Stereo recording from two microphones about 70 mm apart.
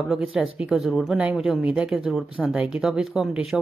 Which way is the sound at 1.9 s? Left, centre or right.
Centre.